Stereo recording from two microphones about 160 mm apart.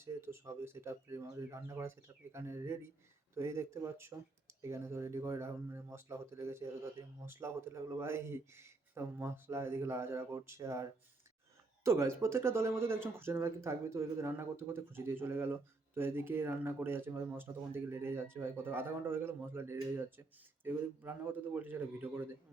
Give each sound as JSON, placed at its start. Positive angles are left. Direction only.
{"t": 0.0, "sound": "speech", "side_deg": -15}